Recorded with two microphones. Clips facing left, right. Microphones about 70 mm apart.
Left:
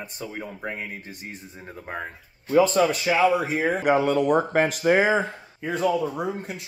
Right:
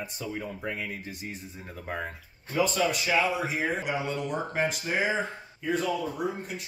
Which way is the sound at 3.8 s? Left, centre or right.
Left.